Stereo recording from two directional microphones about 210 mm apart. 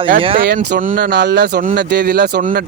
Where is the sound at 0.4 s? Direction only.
45° right (ahead or behind).